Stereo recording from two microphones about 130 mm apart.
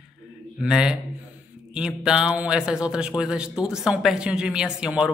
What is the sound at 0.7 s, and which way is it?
A man's voice, 5° right (ahead or behind).